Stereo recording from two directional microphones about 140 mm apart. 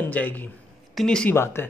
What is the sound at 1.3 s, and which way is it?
Speech, 15° left (ahead or behind).